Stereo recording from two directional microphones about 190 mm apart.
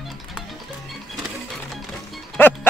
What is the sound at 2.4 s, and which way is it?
Music, 10° left (ahead or behind).